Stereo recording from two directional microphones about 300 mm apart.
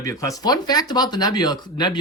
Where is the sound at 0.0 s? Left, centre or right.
Centre.